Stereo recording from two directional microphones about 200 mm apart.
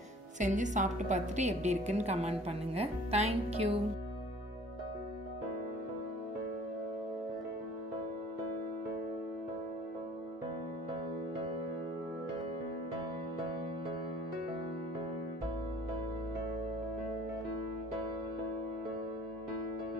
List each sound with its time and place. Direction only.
0.4 s a woman's voice: 40° right (ahead or behind)